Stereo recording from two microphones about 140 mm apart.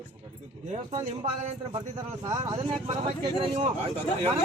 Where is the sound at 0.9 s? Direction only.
50° right (ahead or behind).